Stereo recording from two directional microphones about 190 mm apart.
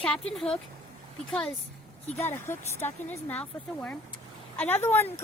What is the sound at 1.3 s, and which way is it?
A woman's voice, 5° left (ahead or behind).